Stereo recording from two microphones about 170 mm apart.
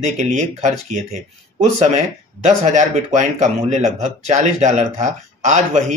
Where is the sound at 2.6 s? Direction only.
45° right (ahead or behind).